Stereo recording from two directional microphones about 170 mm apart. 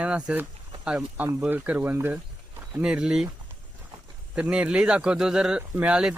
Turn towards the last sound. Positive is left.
turn(degrees=-5)  # may be behind; listen again after turning